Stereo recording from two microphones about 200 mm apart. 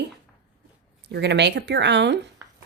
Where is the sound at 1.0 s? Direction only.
55° right (ahead or behind).